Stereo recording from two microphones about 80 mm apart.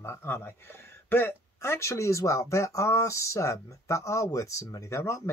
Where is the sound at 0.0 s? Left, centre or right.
Left.